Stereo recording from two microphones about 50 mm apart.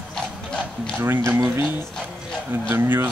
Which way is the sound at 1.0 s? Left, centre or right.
Right.